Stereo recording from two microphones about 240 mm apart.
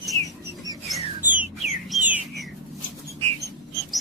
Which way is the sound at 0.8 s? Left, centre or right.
Centre.